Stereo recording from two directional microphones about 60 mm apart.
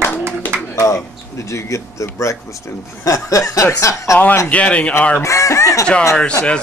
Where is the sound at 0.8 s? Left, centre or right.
Left.